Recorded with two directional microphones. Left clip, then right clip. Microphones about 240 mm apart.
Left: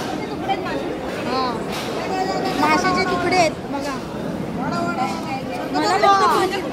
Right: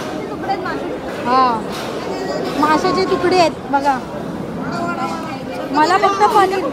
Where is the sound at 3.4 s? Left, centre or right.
Right.